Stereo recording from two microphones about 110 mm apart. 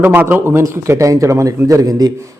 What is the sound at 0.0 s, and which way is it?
A man's voice, 20° right (ahead or behind).